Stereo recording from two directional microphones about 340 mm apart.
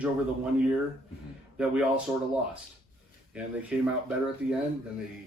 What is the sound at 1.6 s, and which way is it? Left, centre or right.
Speech, centre.